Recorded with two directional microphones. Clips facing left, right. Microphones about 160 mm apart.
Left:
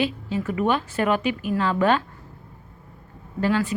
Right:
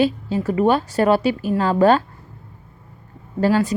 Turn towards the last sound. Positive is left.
turn(degrees=-40)  # may be behind; listen again after turning